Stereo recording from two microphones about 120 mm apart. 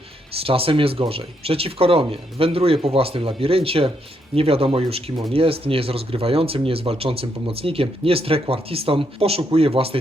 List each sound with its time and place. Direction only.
0.3 s speech: 50° right (ahead or behind)